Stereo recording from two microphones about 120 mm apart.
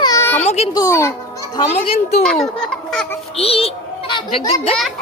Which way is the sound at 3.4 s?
55° left (ahead or behind).